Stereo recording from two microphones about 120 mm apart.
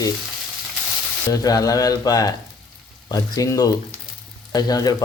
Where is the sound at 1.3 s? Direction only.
30° left (ahead or behind).